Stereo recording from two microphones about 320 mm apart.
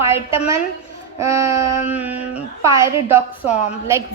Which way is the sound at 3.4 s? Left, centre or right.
Left.